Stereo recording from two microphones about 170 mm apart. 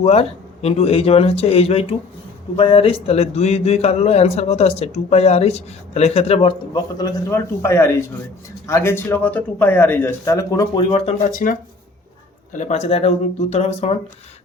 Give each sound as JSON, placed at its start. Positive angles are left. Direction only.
{"t": 0.0, "sound": "speech", "side_deg": 40}
{"t": 11.3, "sound": "speech", "side_deg": 50}
{"t": 12.5, "sound": "speech", "side_deg": 40}